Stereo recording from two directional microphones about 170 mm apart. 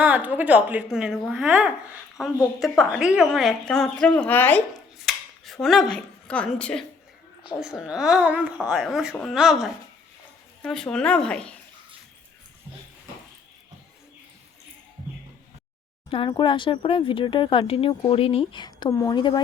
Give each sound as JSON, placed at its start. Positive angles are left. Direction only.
{"t": 0.0, "sound": "a woman's voice", "side_deg": -10}
{"t": 4.9, "sound": "a sound", "side_deg": 0}
{"t": 7.6, "sound": "a woman's voice", "side_deg": -5}
{"t": 16.0, "sound": "speech", "side_deg": 30}